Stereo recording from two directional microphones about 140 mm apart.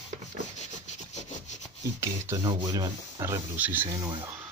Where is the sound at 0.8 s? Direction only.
55° left (ahead or behind).